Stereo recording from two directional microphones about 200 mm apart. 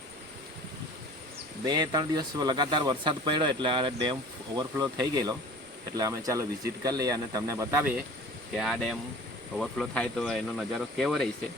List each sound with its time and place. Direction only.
1.6 s speech: 20° right (ahead or behind)
8.5 s speech: centre (ahead or behind)